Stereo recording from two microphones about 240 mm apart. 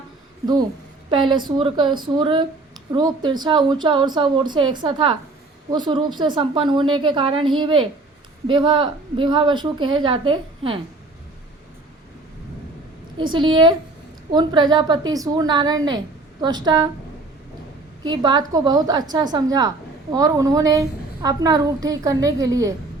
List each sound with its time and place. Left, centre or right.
1.1 s a woman's voice: centre
13.1 s a woman's voice: centre
18.0 s a woman's voice: centre